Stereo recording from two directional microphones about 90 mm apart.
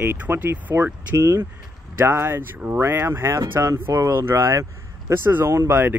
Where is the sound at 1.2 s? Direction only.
35° right (ahead or behind).